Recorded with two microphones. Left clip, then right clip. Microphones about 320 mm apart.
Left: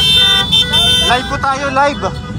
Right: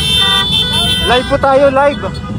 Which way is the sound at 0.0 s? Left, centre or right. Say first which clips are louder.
Left 1 dB; left.